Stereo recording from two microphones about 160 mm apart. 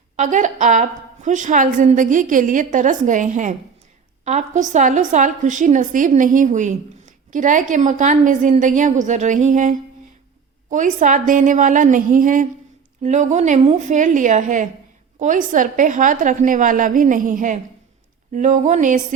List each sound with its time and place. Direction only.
0.2 s a woman's voice: 50° right (ahead or behind)